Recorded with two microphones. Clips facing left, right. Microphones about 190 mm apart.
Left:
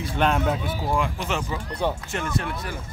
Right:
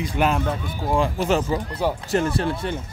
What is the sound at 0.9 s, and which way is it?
Speech, 35° right (ahead or behind).